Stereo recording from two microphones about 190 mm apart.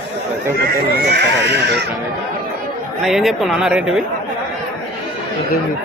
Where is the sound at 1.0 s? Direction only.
60° right (ahead or behind).